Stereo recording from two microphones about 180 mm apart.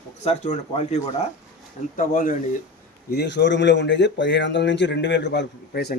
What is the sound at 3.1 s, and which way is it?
Speech, 70° left (ahead or behind).